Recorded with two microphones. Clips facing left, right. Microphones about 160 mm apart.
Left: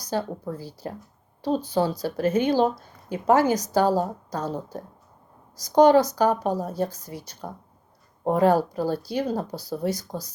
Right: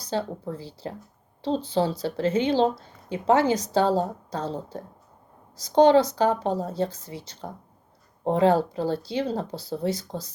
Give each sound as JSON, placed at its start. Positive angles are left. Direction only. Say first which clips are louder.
{"t": 0.5, "sound": "a woman's voice", "louder": "left 1 dB", "side_deg": -25}